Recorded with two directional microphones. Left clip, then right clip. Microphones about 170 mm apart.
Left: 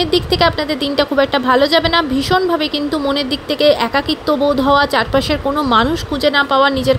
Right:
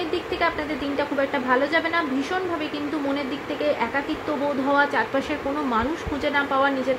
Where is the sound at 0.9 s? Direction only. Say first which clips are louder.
Left 10 dB; 45° left (ahead or behind).